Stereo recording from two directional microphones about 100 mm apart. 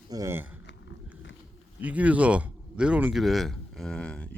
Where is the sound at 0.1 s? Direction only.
40° right (ahead or behind).